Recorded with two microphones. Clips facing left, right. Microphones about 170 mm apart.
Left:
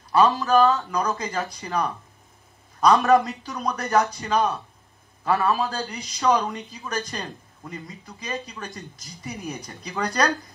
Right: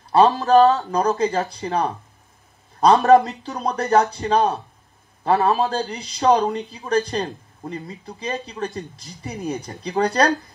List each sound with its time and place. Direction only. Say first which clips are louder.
0.2 s a man's voice: right 4 dB; 40° right (ahead or behind)